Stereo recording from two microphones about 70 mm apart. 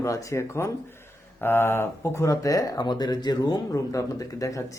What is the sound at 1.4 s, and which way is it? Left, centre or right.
Speech, left.